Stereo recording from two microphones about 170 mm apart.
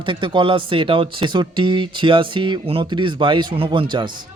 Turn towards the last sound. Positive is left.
turn(degrees=-30)  # may be behind; listen again after turning